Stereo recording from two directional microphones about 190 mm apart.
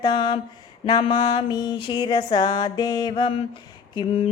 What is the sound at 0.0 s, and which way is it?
Mantra, 25° left (ahead or behind).